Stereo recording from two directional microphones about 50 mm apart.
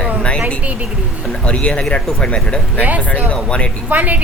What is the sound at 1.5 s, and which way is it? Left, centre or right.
Speech, left.